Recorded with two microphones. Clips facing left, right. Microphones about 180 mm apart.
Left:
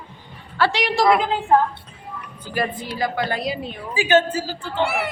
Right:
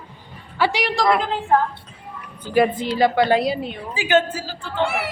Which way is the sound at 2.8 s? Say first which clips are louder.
Right 7 dB; 25° right (ahead or behind).